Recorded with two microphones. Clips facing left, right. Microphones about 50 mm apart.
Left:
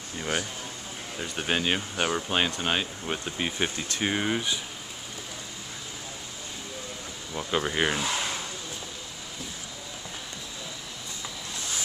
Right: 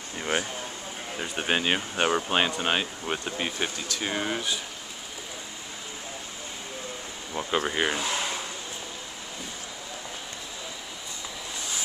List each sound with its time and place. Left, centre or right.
0.2 s speech: centre
3.4 s speech: centre
7.3 s speech: centre